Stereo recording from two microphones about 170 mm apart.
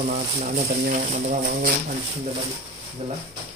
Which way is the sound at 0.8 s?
55° right (ahead or behind).